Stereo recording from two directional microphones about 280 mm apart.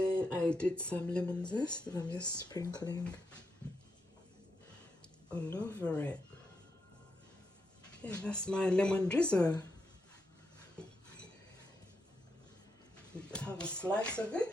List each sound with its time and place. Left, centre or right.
0.1 s speech: centre
1.5 s speech: centre
5.3 s speech: centre
8.0 s speech: centre
13.3 s speech: centre